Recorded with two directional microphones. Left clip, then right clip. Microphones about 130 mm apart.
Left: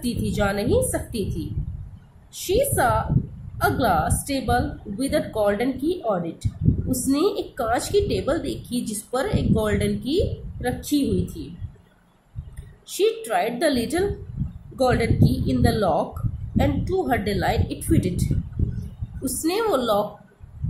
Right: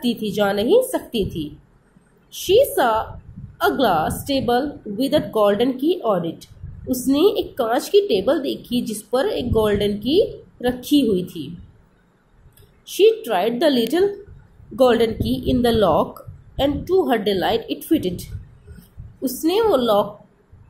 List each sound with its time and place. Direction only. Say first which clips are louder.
0.0 s a woman's voice: right 4 dB; 20° right (ahead or behind)
12.8 s a woman's voice: right 7 dB; 15° right (ahead or behind)